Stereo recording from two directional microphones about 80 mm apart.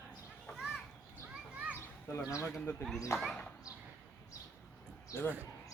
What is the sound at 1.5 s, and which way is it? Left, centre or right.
Children playing, centre.